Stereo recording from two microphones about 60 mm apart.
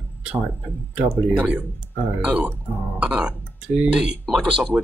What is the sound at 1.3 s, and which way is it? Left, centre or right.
Speech, right.